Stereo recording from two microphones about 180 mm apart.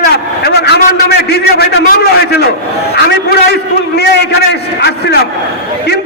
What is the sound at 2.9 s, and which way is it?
A man's voice, 65° left (ahead or behind).